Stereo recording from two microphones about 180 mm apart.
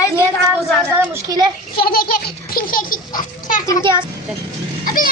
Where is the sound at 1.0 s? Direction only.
20° right (ahead or behind).